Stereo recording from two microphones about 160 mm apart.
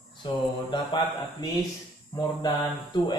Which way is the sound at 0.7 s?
25° left (ahead or behind).